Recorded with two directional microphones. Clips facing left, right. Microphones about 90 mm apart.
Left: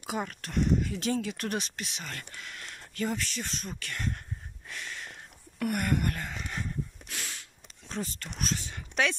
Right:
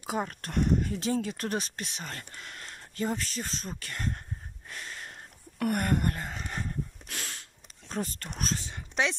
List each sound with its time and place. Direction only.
0.0 s speech: 35° right (ahead or behind)
0.5 s speech: 50° right (ahead or behind)
0.9 s speech: 30° right (ahead or behind)
4.6 s a sound: 35° right (ahead or behind)
5.6 s speech: 45° right (ahead or behind)
6.0 s a sound: 30° right (ahead or behind)
7.9 s speech: 45° right (ahead or behind)
8.6 s speech: 25° right (ahead or behind)